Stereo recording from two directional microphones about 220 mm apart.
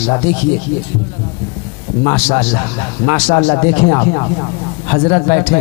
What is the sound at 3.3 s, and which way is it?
Speech, 25° left (ahead or behind).